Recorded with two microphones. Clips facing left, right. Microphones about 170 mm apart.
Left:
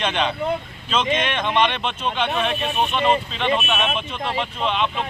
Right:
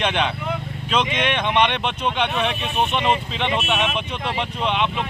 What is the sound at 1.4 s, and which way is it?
Speech, 15° right (ahead or behind).